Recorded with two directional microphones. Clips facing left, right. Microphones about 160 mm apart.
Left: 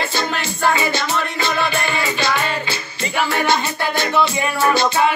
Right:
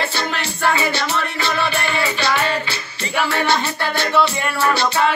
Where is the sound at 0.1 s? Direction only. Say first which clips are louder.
Left 2 dB; 45° left (ahead or behind).